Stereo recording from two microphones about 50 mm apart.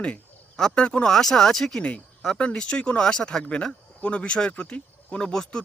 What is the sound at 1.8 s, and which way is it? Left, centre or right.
Speech, left.